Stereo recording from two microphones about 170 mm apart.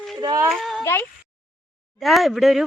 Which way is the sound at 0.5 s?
Centre (ahead or behind).